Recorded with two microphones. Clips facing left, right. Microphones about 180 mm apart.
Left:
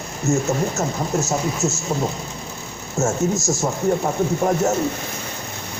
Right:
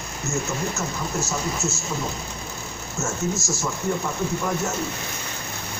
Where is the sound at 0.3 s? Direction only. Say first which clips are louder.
Left 8 dB; 75° left (ahead or behind).